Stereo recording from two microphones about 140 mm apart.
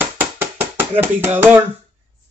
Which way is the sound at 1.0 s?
15° right (ahead or behind).